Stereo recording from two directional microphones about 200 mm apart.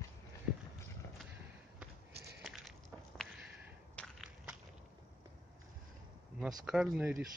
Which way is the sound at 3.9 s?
Centre (ahead or behind).